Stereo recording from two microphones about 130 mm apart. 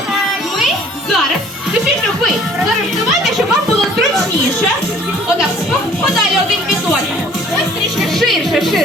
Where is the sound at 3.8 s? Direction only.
Centre (ahead or behind).